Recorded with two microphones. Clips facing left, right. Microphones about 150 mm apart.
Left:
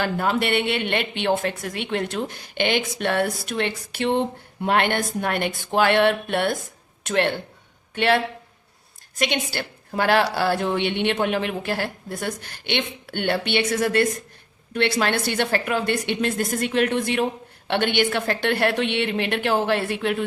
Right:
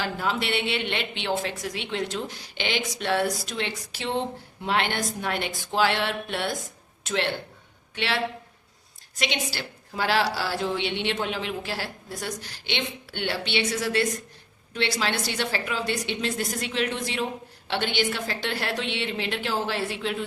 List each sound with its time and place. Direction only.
0.0 s a woman's voice: 55° left (ahead or behind)